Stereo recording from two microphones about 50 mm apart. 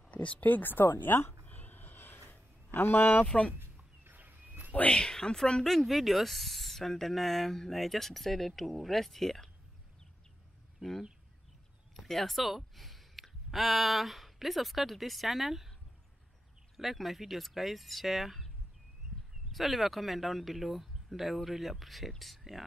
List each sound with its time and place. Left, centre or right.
0.1 s speech: left
1.4 s a sound: left
2.7 s speech: left
3.3 s speech: left
4.0 s turkey: right
4.8 s speech: centre
10.8 s speech: centre
16.7 s speech: centre
19.1 s a sound: centre
19.5 s speech: centre